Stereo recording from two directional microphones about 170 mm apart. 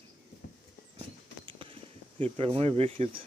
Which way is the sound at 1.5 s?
30° right (ahead or behind).